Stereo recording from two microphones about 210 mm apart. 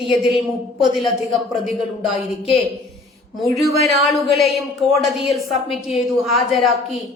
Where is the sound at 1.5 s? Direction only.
Centre (ahead or behind).